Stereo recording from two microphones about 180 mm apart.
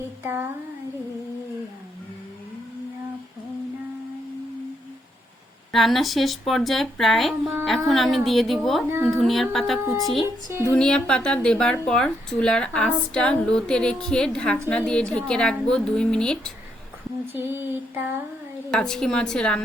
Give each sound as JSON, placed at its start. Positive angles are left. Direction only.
{"t": 5.7, "sound": "speech", "side_deg": 0}
{"t": 17.3, "sound": "a sound", "side_deg": -10}
{"t": 18.7, "sound": "speech", "side_deg": 5}